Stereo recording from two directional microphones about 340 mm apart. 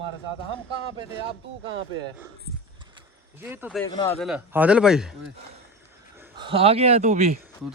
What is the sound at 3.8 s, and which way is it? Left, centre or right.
Speech, centre.